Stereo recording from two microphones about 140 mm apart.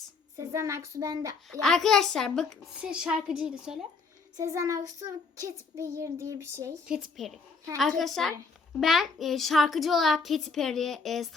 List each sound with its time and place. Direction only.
0.3 s child singing: 20° right (ahead or behind)
1.5 s a child's voice: centre (ahead or behind)
4.4 s child singing: 20° right (ahead or behind)
6.8 s a child's voice: centre (ahead or behind)